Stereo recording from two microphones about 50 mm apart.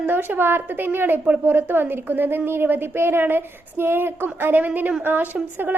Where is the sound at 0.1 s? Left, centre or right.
Right.